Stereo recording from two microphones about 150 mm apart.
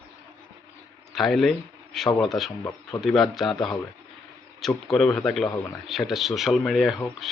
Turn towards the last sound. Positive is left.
turn(degrees=0)  # may be behind; listen again after turning